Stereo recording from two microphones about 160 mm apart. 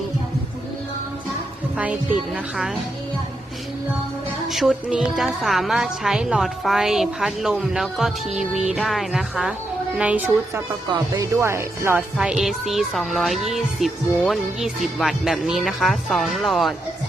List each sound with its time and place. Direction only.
1.8 s speech: 5° right (ahead or behind)
4.4 s a woman's voice: centre (ahead or behind)
12.1 s a woman's voice: 5° right (ahead or behind)